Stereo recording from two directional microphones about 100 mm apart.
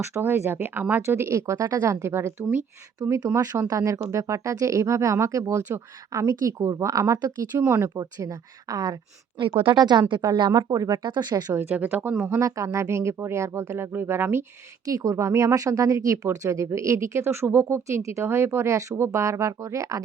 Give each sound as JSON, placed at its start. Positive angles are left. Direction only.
{"t": 0.0, "sound": "speech", "side_deg": -25}
{"t": 3.0, "sound": "speech", "side_deg": -35}
{"t": 9.4, "sound": "speech", "side_deg": -60}
{"t": 9.7, "sound": "speech", "side_deg": -45}
{"t": 11.5, "sound": "speech", "side_deg": -15}
{"t": 12.4, "sound": "speech", "side_deg": -30}
{"t": 14.8, "sound": "speech", "side_deg": -35}